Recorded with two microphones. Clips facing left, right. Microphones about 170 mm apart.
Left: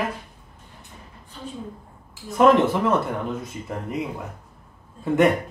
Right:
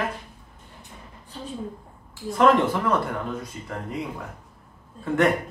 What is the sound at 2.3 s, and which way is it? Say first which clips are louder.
Speech: left 2 dB; 20° left (ahead or behind).